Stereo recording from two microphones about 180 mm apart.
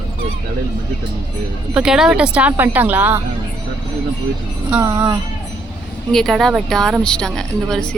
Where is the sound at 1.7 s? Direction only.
5° right (ahead or behind).